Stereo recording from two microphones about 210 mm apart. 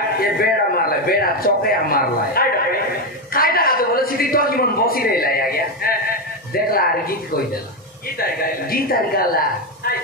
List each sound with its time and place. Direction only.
0.2 s a man's voice: 45° left (ahead or behind)
8.2 s a man's voice: 45° left (ahead or behind)